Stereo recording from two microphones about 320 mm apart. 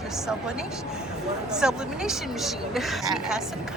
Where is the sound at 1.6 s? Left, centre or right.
Centre.